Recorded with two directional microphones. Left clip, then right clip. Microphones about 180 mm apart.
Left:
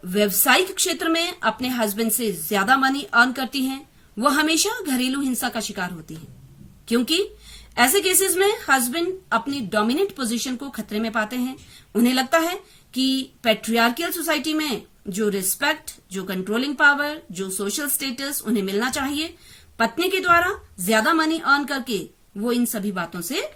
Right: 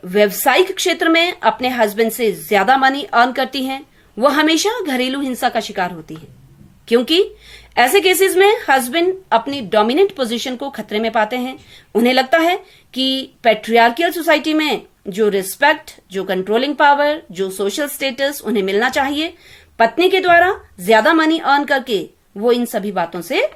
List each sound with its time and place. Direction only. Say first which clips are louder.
0.1 s speech: right 5 dB; 45° left (ahead or behind)